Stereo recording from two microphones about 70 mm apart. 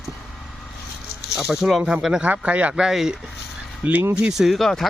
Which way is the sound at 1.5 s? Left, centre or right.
Centre.